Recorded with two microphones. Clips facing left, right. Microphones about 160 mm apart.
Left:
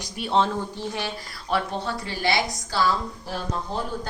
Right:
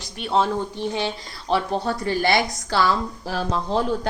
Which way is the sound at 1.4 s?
35° right (ahead or behind).